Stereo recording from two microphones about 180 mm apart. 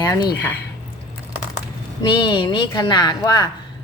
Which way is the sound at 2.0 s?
25° left (ahead or behind).